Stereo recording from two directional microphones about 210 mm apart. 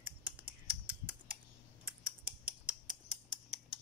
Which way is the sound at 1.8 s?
5° right (ahead or behind).